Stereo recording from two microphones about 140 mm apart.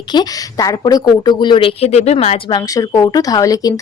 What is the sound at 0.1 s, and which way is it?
A woman's voice, 30° left (ahead or behind).